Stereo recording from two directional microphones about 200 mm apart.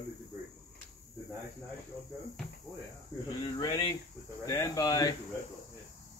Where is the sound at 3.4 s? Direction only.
20° left (ahead or behind).